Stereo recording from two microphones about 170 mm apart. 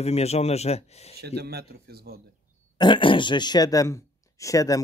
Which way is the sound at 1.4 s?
70° right (ahead or behind).